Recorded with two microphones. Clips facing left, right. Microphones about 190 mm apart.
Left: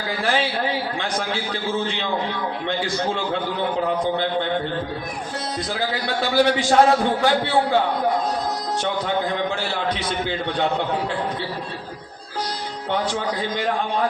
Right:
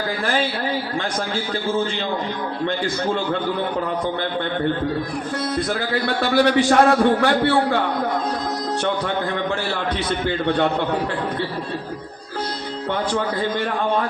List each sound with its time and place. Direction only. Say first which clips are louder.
5.5 s a man's voice: right 2 dB; 55° right (ahead or behind)
10.1 s a man's voice: right 4 dB; 55° right (ahead or behind)
12.9 s a man's voice: right 1 dB; 55° right (ahead or behind)